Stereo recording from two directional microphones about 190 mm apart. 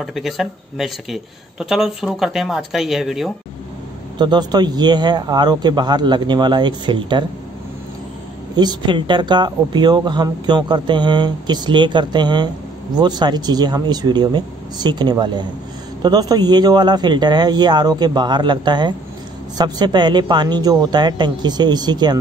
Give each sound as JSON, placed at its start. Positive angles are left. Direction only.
{"t": 0.0, "sound": "speech", "side_deg": 0}
{"t": 4.2, "sound": "speech", "side_deg": -20}
{"t": 8.5, "sound": "speech", "side_deg": -25}